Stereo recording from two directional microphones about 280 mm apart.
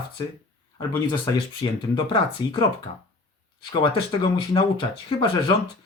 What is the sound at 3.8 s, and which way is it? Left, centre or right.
Speech, centre.